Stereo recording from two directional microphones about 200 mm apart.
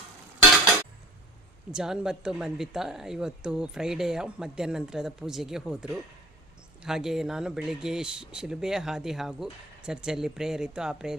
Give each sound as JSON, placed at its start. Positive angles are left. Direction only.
{"t": 1.7, "sound": "speech", "side_deg": -5}